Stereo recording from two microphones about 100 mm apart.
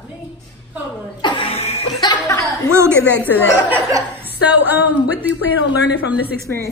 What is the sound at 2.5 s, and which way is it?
Speech, 25° right (ahead or behind).